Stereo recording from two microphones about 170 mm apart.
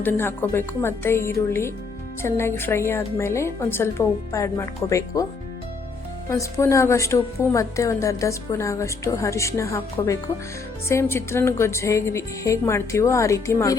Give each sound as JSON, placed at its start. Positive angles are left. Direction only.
{"t": 0.0, "sound": "a woman's voice", "side_deg": 15}
{"t": 6.2, "sound": "a woman's voice", "side_deg": 15}